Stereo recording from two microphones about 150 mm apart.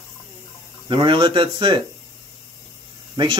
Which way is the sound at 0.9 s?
35° right (ahead or behind).